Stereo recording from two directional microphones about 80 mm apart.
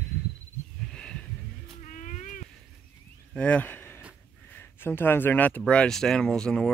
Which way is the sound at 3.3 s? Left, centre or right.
Centre.